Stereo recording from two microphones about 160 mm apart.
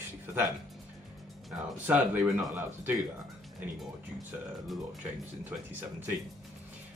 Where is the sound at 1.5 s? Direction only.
10° right (ahead or behind).